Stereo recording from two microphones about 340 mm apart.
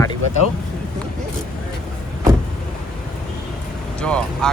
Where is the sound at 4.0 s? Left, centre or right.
Centre.